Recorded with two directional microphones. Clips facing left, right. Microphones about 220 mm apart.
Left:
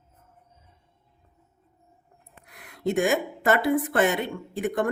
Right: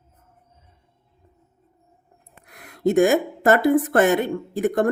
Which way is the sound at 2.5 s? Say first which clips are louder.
Right 6 dB; 45° right (ahead or behind).